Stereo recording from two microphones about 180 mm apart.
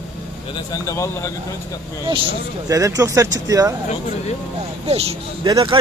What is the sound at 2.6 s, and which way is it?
A man's voice, 20° right (ahead or behind).